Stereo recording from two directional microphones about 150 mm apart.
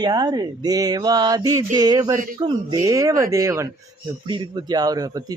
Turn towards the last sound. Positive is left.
turn(degrees=-25)  # may be behind; listen again after turning